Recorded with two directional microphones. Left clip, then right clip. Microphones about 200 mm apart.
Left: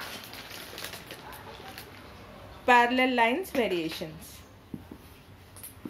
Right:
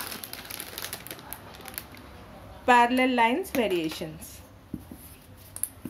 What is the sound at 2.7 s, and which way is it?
A woman's voice, 5° right (ahead or behind).